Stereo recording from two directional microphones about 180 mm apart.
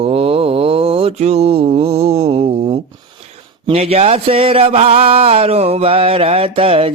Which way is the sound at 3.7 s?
35° right (ahead or behind).